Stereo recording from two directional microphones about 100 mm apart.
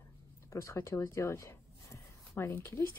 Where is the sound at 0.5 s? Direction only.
30° left (ahead or behind).